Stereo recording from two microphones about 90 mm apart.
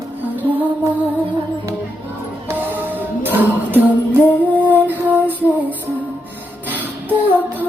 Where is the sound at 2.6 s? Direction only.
20° right (ahead or behind).